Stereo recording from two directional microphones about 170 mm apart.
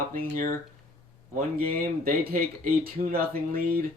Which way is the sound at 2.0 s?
60° right (ahead or behind).